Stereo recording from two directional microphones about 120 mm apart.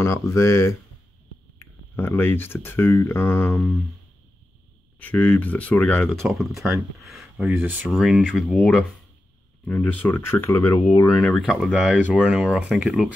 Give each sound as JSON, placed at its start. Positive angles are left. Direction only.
{"t": 0.3, "sound": "speech", "side_deg": 25}
{"t": 4.9, "sound": "speech", "side_deg": 15}
{"t": 6.2, "sound": "speech", "side_deg": 0}
{"t": 7.0, "sound": "a sound", "side_deg": 0}
{"t": 7.4, "sound": "speech", "side_deg": -15}
{"t": 7.9, "sound": "speech", "side_deg": -5}
{"t": 9.7, "sound": "speech", "side_deg": 15}
{"t": 11.3, "sound": "speech", "side_deg": 0}